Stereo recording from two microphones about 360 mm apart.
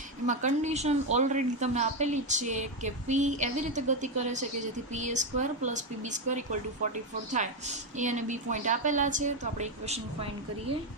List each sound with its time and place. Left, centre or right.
0.3 s a woman's voice: centre